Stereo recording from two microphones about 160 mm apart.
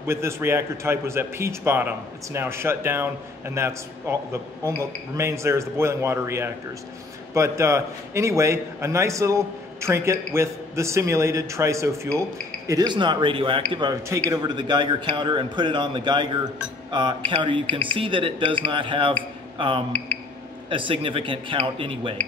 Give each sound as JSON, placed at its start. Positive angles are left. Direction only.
{"t": 0.0, "sound": "a man's voice", "side_deg": -15}
{"t": 17.3, "sound": "speech", "side_deg": -30}
{"t": 17.6, "sound": "speech", "side_deg": 10}
{"t": 17.9, "sound": "speech", "side_deg": -35}
{"t": 20.7, "sound": "speech", "side_deg": -30}